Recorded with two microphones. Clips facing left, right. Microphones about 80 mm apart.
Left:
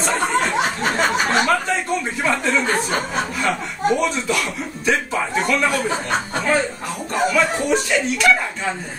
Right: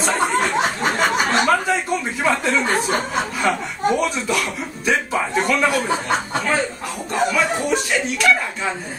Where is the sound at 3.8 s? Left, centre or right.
Centre.